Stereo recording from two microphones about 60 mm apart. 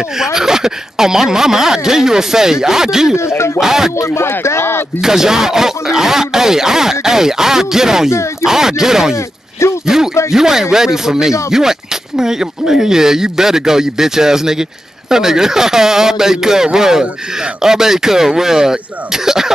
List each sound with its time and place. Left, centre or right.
0.2 s speech: centre
3.2 s speech: left
3.5 s speech: centre
4.0 s speech: left
5.0 s speech: centre
8.1 s speech: left
8.5 s speech: centre
9.1 s speech: left
10.3 s speech: centre